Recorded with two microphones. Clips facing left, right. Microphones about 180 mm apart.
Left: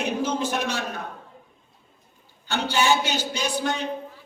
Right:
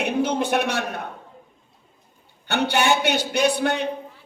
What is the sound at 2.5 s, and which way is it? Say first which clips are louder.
A man's voice: right 2 dB; 65° right (ahead or behind).